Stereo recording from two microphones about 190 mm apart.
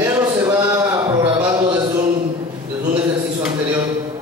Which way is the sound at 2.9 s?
10° right (ahead or behind).